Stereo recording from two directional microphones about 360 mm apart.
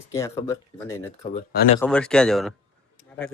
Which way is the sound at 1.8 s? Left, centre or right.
Centre.